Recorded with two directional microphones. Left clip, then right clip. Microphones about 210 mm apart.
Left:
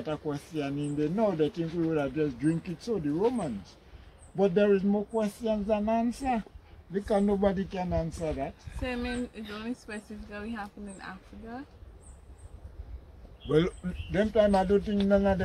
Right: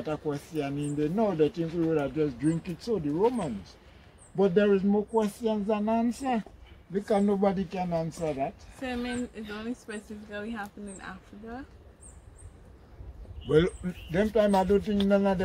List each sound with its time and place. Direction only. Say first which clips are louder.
0.0 s speech: right 2 dB; 5° right (ahead or behind)
8.8 s speech: even; 10° left (ahead or behind)
13.5 s speech: right 2 dB; 10° right (ahead or behind)